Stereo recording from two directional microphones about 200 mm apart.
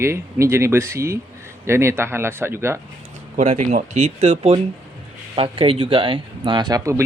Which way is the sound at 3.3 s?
35° right (ahead or behind).